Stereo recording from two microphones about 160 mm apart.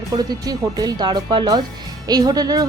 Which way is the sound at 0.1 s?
25° right (ahead or behind).